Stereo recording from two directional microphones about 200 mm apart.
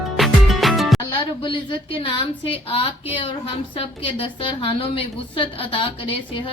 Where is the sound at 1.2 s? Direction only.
25° left (ahead or behind).